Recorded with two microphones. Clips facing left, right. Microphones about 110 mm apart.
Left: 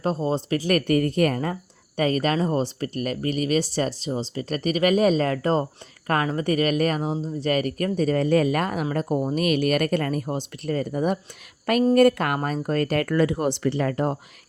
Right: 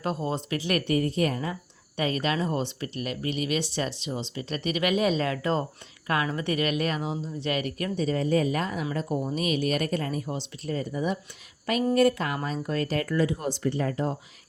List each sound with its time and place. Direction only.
0.0 s speech: 30° left (ahead or behind); by 14.2 s 60° left (ahead or behind)